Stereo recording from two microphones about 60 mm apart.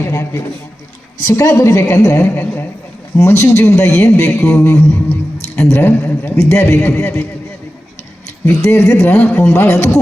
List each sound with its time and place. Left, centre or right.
0.0 s music: left
1.5 s a man's voice: left
2.3 s music: left
3.2 s a man's voice: left
4.6 s music: left
5.5 s a man's voice: left
8.6 s a man's voice: left